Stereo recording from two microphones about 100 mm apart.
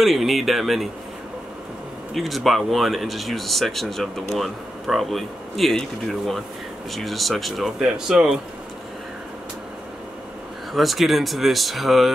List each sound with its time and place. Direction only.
0.0 s speech: centre (ahead or behind)
2.1 s speech: centre (ahead or behind)
10.7 s speech: centre (ahead or behind)